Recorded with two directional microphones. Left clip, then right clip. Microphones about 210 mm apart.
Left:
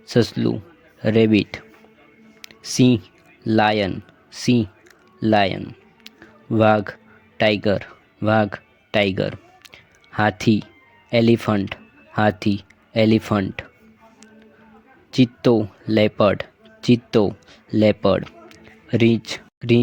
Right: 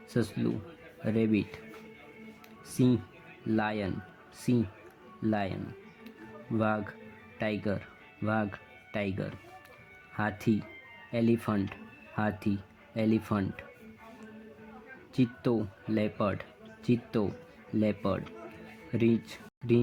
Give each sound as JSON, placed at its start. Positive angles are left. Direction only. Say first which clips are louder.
{"t": 0.1, "sound": "speech", "louder": "left 13 dB", "side_deg": 40}
{"t": 2.4, "sound": "music", "louder": "left 11 dB", "side_deg": 40}
{"t": 3.4, "sound": "speech", "louder": "left 14 dB", "side_deg": 40}
{"t": 6.1, "sound": "a sound", "louder": "left 11 dB", "side_deg": 40}
{"t": 7.3, "sound": "speech", "louder": "left 15 dB", "side_deg": 40}
{"t": 15.1, "sound": "speech", "louder": "left 13 dB", "side_deg": 40}